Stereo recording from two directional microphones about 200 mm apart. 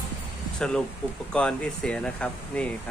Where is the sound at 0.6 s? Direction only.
5° left (ahead or behind).